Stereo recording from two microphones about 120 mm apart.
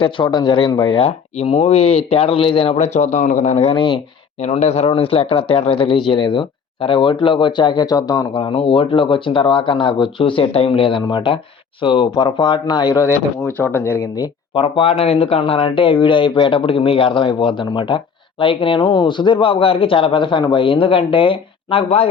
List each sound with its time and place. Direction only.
0.0 s speech: 40° left (ahead or behind)
2.7 s speech: 75° left (ahead or behind)
3.8 s speech: 40° left (ahead or behind)
4.4 s speech: 75° left (ahead or behind); by 8.3 s 30° left (ahead or behind)
8.3 s speech: 45° left (ahead or behind)
13.4 s speech: 15° left (ahead or behind)
14.5 s speech: 50° left (ahead or behind)